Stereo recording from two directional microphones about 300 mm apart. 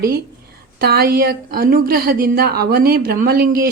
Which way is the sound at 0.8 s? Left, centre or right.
Right.